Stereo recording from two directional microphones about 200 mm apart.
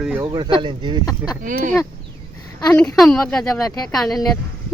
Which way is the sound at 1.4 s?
40° right (ahead or behind).